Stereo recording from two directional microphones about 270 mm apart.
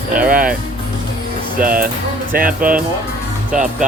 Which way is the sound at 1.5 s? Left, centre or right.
Right.